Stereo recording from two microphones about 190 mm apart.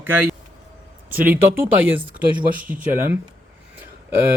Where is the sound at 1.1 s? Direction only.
10° right (ahead or behind).